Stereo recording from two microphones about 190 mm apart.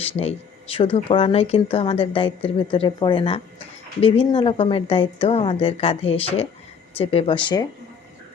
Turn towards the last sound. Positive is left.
turn(degrees=25)  # may be behind; listen again after turning